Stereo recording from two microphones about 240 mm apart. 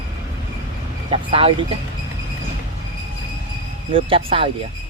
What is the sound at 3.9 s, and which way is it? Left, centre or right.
Speech, right.